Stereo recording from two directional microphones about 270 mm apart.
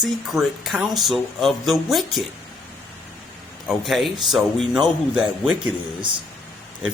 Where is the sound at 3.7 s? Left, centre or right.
Centre.